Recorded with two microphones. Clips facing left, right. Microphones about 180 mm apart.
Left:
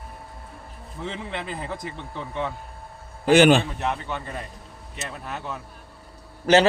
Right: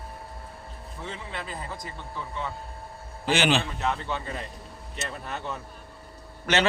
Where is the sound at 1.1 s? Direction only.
70° left (ahead or behind).